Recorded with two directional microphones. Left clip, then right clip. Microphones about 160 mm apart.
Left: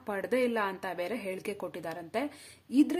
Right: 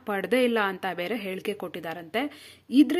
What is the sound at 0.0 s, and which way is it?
Speech, 20° right (ahead or behind).